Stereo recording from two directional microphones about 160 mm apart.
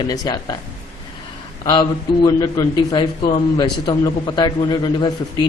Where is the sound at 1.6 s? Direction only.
30° left (ahead or behind).